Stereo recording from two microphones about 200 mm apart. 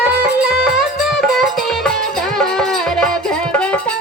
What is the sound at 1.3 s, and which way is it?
Music, centre (ahead or behind).